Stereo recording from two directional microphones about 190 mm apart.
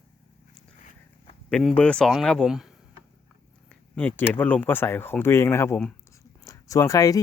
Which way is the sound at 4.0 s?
10° left (ahead or behind).